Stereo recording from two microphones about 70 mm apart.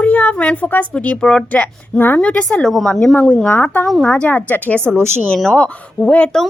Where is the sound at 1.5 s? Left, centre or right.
Left.